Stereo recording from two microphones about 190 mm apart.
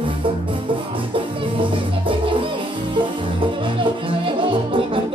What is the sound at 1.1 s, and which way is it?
Music, 25° right (ahead or behind).